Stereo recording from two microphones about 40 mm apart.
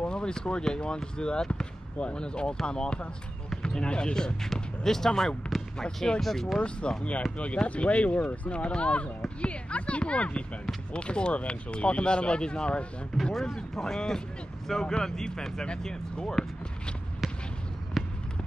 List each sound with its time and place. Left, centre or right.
0.0 s speech: left; by 6.6 s centre
6.6 s speech: left
13.2 s speech: centre
18.0 s a sound: centre